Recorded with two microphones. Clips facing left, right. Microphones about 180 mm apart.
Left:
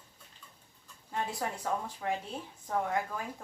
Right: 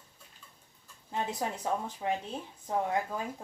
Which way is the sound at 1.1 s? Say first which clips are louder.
Right 2 dB; 20° right (ahead or behind).